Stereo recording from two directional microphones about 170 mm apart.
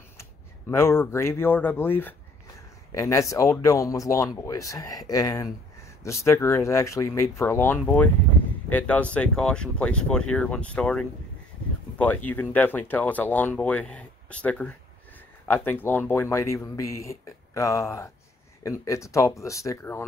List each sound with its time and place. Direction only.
0.2 s speech: 15° left (ahead or behind)
12.3 s speech: 10° left (ahead or behind)